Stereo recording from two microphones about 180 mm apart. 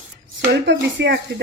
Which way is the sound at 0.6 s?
75° right (ahead or behind).